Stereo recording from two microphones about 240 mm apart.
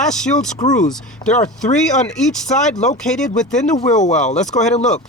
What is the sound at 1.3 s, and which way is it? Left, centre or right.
Speech, left.